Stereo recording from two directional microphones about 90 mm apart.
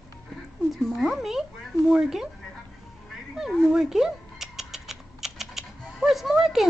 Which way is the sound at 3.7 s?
5° right (ahead or behind).